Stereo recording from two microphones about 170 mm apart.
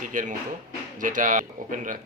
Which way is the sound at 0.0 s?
50° right (ahead or behind).